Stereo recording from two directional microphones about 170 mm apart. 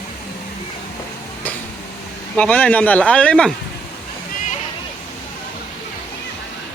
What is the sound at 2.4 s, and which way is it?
Speech, 10° left (ahead or behind).